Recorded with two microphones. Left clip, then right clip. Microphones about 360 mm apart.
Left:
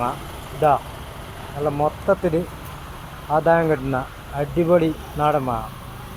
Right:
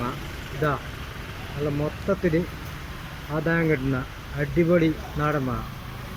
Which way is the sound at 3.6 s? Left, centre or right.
Left.